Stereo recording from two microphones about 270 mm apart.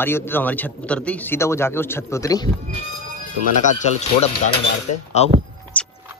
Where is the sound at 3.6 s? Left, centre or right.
Left.